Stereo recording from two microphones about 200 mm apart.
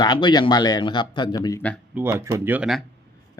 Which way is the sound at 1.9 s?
10° right (ahead or behind).